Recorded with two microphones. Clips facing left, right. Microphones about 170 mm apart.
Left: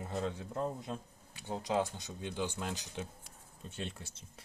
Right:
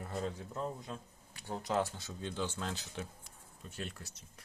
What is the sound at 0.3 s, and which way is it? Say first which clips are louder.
Speech: left 3 dB; 25° left (ahead or behind).